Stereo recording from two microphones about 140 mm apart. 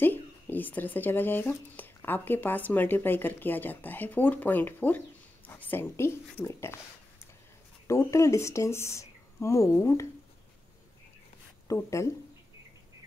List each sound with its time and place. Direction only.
0.0 s speech: 15° left (ahead or behind)
7.8 s speech: 20° left (ahead or behind)
11.6 s speech: 20° left (ahead or behind)